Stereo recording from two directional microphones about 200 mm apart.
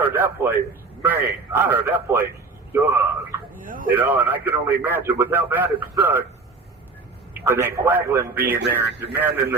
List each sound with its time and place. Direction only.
0.0 s a man's voice: 10° right (ahead or behind)
3.7 s a sound: 45° right (ahead or behind)
3.9 s a man's voice: 10° right (ahead or behind)
7.3 s a man's voice: 10° right (ahead or behind)